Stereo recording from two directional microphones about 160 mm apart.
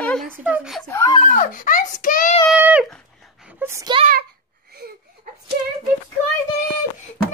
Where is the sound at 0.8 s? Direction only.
15° left (ahead or behind).